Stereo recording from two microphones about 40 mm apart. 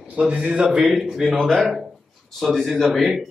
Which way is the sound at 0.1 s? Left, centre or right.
Right.